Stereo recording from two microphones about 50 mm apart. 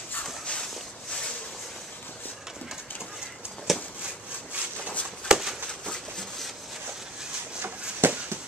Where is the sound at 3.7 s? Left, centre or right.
Centre.